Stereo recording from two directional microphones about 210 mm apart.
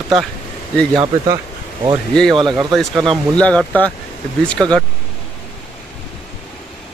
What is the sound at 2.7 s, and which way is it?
Speech, centre (ahead or behind).